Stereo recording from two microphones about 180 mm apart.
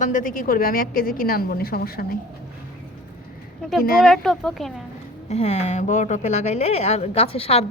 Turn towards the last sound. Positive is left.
turn(degrees=35)  # may be behind; listen again after turning